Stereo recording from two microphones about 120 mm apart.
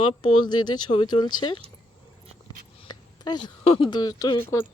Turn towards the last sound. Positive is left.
turn(degrees=35)  # may be behind; listen again after turning